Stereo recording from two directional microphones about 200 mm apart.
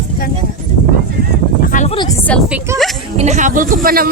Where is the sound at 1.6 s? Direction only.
40° left (ahead or behind).